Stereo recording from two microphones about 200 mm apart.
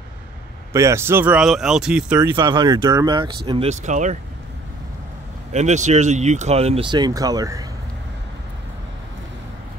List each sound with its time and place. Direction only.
0.7 s speech: 15° right (ahead or behind)
2.3 s speech: 20° right (ahead or behind)
3.8 s speech: 35° right (ahead or behind)
5.5 s speech: 35° right (ahead or behind); by 7.6 s 20° right (ahead or behind)